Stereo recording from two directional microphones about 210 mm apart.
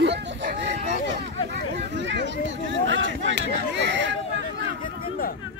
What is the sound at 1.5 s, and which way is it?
Speech, 55° right (ahead or behind).